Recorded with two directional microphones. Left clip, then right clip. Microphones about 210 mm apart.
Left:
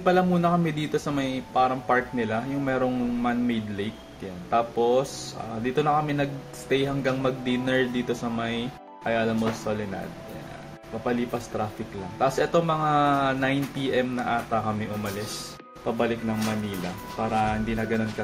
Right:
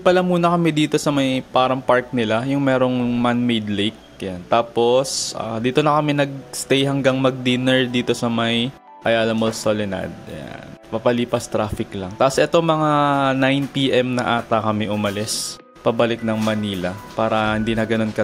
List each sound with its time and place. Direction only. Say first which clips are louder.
0.0 s speech: right 6 dB; 45° right (ahead or behind)
11.1 s speech: right 9 dB; 50° right (ahead or behind)